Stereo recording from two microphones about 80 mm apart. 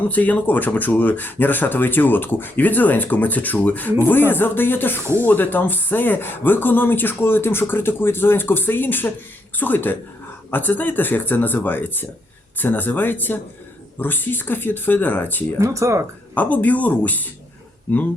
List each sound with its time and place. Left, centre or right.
0.1 s speech: centre
15.6 s speech: right
16.3 s speech: centre